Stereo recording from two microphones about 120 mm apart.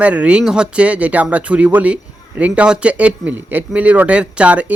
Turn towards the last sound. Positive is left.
turn(degrees=-10)  # may be behind; listen again after turning